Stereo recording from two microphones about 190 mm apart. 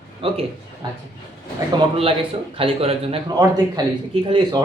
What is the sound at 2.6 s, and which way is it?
Speech, 30° right (ahead or behind).